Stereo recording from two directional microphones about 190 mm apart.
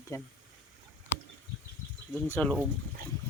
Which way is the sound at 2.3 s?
5° left (ahead or behind).